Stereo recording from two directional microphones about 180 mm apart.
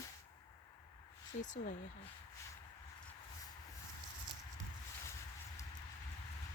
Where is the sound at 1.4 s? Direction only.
45° left (ahead or behind).